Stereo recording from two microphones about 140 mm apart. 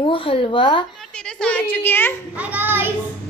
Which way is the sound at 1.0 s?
5° left (ahead or behind).